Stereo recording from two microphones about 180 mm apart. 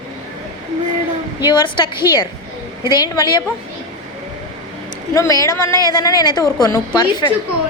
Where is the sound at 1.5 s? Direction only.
25° left (ahead or behind).